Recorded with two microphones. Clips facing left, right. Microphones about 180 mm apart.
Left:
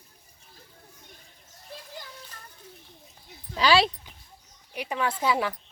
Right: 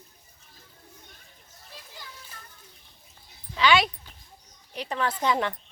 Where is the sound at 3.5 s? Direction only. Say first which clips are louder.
Left 1 dB; 35° left (ahead or behind).